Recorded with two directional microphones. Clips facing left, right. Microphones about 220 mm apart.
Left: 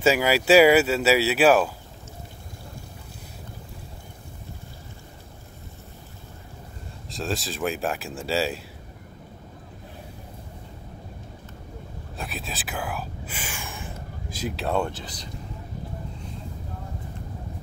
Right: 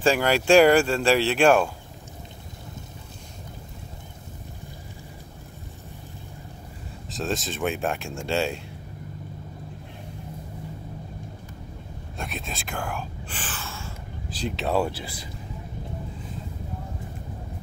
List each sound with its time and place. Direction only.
0.0 s speech: 5° left (ahead or behind)
7.1 s speech: centre (ahead or behind)
12.2 s whispering: centre (ahead or behind)